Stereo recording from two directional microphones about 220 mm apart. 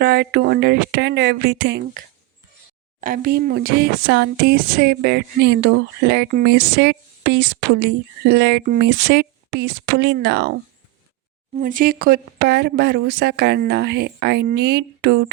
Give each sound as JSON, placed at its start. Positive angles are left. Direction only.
{"t": 0.0, "sound": "speech", "side_deg": -45}
{"t": 3.0, "sound": "speech", "side_deg": -40}
{"t": 11.5, "sound": "speech", "side_deg": -40}